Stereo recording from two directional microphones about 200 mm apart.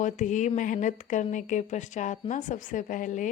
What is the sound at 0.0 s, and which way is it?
A woman's voice, 40° left (ahead or behind).